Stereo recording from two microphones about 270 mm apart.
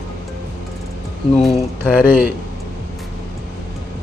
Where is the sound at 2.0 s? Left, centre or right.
Centre.